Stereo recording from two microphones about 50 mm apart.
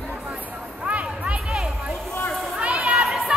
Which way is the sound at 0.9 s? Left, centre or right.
Right.